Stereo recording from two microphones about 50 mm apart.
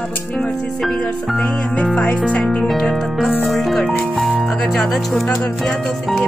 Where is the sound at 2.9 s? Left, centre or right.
Centre.